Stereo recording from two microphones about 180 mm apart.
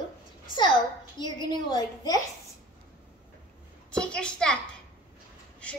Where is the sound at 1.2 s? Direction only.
25° left (ahead or behind).